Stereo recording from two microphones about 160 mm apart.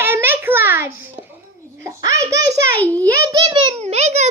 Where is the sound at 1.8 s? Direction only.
20° right (ahead or behind).